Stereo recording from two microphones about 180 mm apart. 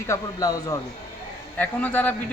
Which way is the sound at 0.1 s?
20° left (ahead or behind).